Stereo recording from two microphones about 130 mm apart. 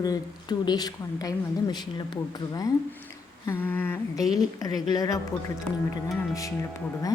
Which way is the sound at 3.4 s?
15° left (ahead or behind).